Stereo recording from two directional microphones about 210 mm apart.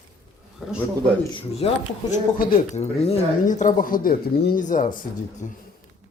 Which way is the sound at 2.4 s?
40° left (ahead or behind).